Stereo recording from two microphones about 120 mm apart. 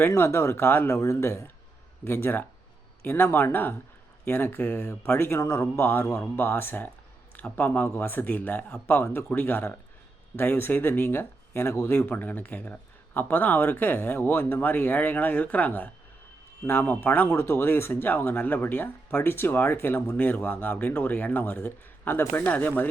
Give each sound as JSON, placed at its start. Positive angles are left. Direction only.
{"t": 0.0, "sound": "speech", "side_deg": 20}